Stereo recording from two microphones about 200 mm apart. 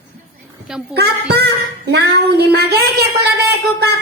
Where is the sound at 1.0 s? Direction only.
55° right (ahead or behind).